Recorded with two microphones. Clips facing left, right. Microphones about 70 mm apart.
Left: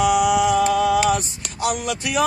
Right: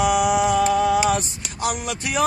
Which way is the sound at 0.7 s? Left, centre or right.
Right.